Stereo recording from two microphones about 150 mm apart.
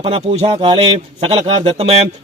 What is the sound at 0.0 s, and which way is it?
A man's voice, 40° right (ahead or behind).